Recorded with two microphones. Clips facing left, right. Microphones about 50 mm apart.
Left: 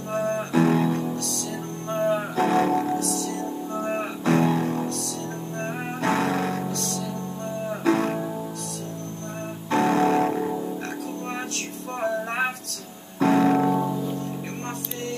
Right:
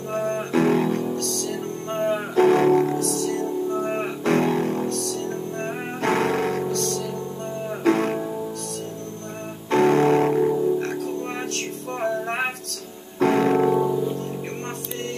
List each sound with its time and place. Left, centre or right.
0.1 s music: right
0.5 s guitar: right
1.9 s music: right
3.0 s music: right
5.9 s music: right
9.7 s music: right
10.3 s music: centre
13.2 s music: right
13.7 s music: centre